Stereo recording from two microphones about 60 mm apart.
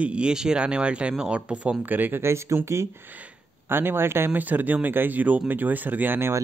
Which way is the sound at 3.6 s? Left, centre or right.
Right.